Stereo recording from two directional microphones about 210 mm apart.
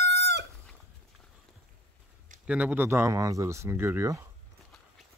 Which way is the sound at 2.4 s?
5° right (ahead or behind).